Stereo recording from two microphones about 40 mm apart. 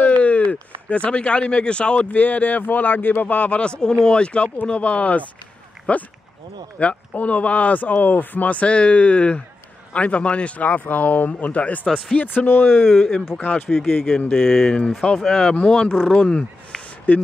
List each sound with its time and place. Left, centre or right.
0.0 s a sound: left
2.0 s speech: left
3.8 s speech: left
12.2 s speech: left
12.8 s speech: centre
17.1 s speech: left